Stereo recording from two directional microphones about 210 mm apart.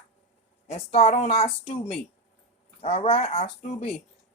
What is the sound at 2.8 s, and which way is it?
A woman's voice, 30° left (ahead or behind).